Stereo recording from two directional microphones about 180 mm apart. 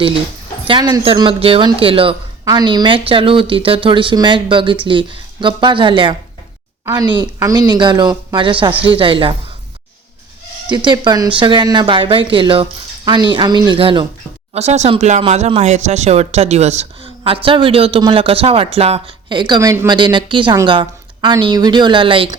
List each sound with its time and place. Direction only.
0.7 s speech: 25° right (ahead or behind)
10.7 s speech: 25° right (ahead or behind)
14.5 s speech: 40° right (ahead or behind)